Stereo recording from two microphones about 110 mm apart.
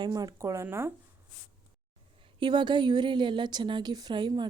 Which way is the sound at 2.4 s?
45° right (ahead or behind).